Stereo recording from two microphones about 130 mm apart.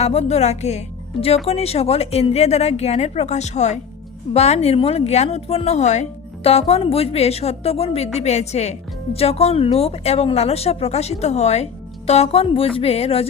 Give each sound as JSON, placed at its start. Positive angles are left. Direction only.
{"t": 0.0, "sound": "a woman's voice", "side_deg": 55}